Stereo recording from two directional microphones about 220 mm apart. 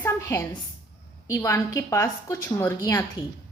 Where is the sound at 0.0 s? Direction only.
15° left (ahead or behind).